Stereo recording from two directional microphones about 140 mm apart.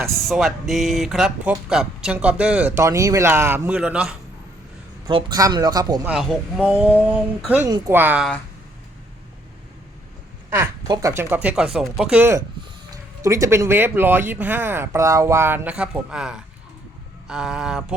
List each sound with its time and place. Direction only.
0.3 s speech: centre (ahead or behind)
2.7 s speech: 20° right (ahead or behind); by 4.1 s 5° right (ahead or behind)
5.0 s speech: 30° right (ahead or behind)
6.1 s speech: 5° right (ahead or behind)
10.8 s speech: 30° right (ahead or behind)
11.1 s speech: 15° right (ahead or behind)
12.9 s speech: 25° right (ahead or behind); by 17.9 s 5° right (ahead or behind)